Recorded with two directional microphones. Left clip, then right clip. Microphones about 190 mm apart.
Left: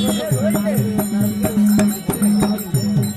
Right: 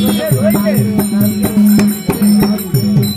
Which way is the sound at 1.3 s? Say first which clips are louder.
Right 5 dB; centre (ahead or behind).